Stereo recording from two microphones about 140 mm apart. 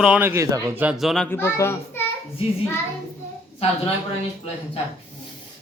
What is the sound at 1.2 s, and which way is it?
Speech, 15° left (ahead or behind).